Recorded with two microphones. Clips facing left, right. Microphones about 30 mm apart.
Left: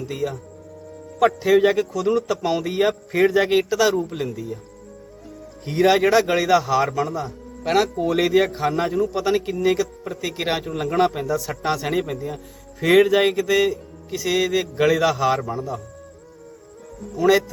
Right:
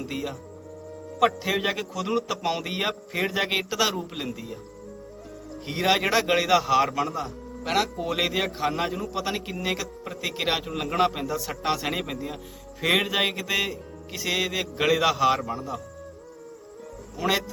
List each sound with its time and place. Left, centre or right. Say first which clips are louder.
0.0 s a man's voice: left 5 dB; centre
3.1 s a man's voice: left 9 dB; centre
3.4 s a man's voice: left 7 dB; centre
5.6 s a man's voice: left 7 dB; centre
7.2 s a man's voice: left 2 dB; centre
13.3 s a man's voice: left 8 dB; centre
17.2 s a man's voice: left 8 dB; centre